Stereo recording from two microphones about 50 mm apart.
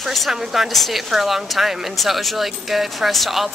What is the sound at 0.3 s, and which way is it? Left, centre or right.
A woman's voice, centre.